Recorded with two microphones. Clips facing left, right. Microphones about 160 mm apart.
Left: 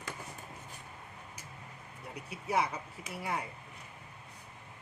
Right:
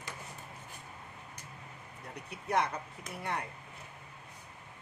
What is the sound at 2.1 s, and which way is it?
Speech, 5° left (ahead or behind).